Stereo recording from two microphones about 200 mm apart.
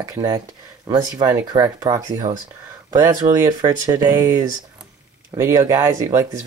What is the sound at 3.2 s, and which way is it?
Speech, 30° right (ahead or behind).